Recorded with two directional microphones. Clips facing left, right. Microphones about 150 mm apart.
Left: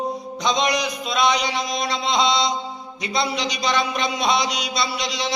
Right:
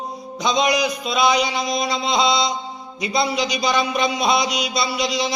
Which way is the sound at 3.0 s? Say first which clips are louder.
Right 3 dB; 5° right (ahead or behind).